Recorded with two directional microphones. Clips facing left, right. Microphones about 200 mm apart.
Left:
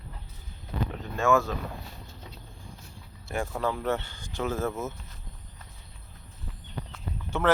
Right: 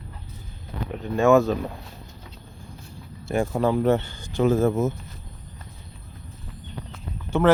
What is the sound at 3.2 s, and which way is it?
Speech, 25° right (ahead or behind).